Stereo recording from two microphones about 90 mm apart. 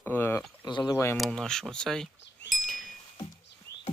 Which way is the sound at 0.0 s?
25° left (ahead or behind).